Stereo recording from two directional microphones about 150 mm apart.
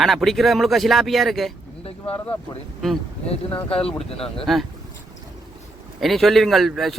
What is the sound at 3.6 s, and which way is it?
Speech, 40° left (ahead or behind).